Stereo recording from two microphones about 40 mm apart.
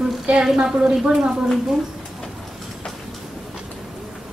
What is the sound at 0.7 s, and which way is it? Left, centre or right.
Speech, right.